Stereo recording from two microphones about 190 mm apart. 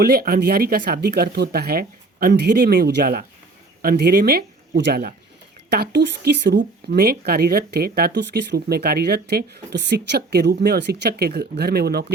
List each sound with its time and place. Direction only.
0.0 s speech: 55° right (ahead or behind)